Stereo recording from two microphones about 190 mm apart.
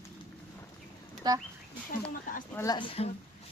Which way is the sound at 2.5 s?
20° left (ahead or behind).